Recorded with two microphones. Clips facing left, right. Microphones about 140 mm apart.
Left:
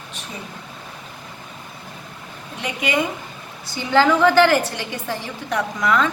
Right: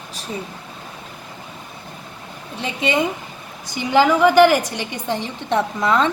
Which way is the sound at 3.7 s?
15° right (ahead or behind).